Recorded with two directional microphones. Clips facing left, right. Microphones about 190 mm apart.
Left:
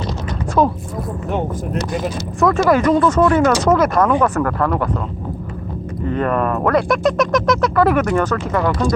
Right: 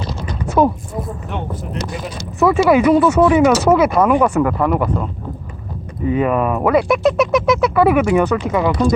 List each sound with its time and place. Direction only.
0.6 s speech: 10° right (ahead or behind)
1.3 s speech: 40° left (ahead or behind)
2.4 s speech: 5° right (ahead or behind)
6.1 s speech: 10° right (ahead or behind)